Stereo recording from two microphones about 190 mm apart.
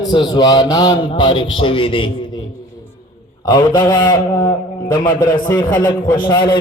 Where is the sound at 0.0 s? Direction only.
20° left (ahead or behind).